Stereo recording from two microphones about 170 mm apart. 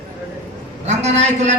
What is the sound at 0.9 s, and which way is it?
Speech, 40° right (ahead or behind).